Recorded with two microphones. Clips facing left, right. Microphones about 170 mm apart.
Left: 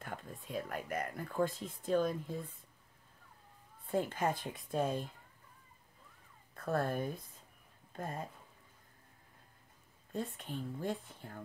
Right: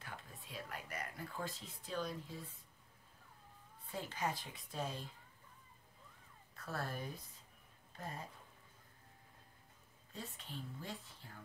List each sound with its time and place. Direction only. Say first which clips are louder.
0.0 s speech: left 7 dB; 50° left (ahead or behind)
3.8 s speech: left 8 dB; 50° left (ahead or behind)
6.5 s speech: left 10 dB; 50° left (ahead or behind)
10.1 s speech: left 9 dB; 55° left (ahead or behind)